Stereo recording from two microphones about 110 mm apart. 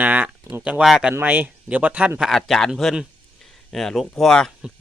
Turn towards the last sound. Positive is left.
turn(degrees=5)  # may be behind; listen again after turning